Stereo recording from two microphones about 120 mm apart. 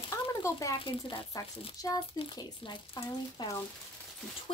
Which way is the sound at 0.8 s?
45° left (ahead or behind).